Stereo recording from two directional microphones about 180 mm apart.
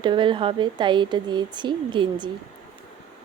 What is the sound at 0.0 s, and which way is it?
Speech, 25° right (ahead or behind).